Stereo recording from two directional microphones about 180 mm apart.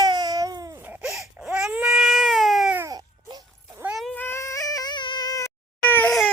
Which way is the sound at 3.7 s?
5° right (ahead or behind).